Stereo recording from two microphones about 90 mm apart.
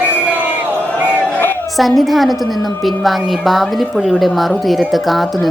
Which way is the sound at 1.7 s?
Centre (ahead or behind).